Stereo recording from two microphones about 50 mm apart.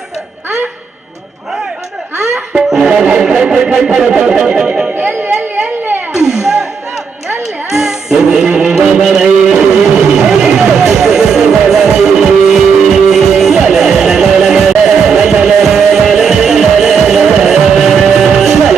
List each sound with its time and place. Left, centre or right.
2.2 s music: centre
4.0 s a sound: centre
4.9 s a sound: right
6.1 s music: centre
7.7 s music: centre
8.7 s music: centre